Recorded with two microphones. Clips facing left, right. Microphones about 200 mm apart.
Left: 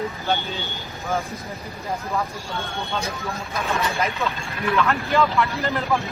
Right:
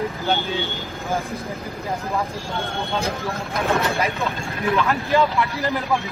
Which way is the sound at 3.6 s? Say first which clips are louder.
Right 4 dB; 60° right (ahead or behind).